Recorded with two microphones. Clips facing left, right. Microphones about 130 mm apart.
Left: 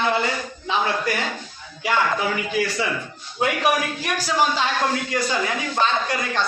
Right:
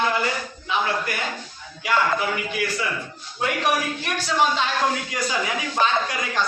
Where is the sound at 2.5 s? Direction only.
30° left (ahead or behind).